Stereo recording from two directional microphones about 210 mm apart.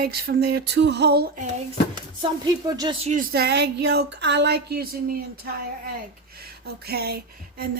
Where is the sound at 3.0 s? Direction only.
35° right (ahead or behind).